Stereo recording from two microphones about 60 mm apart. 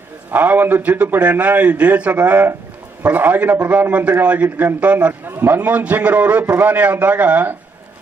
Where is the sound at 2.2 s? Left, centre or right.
Right.